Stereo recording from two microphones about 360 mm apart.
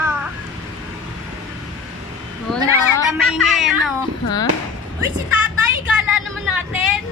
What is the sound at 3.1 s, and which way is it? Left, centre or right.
Cat, centre.